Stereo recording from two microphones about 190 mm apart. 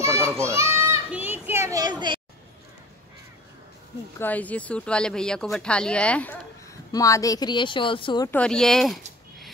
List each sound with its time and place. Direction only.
0.0 s children playing: 15° right (ahead or behind)
4.2 s speech: 10° left (ahead or behind)
6.9 s speech: 15° left (ahead or behind)
8.3 s speech: 5° left (ahead or behind)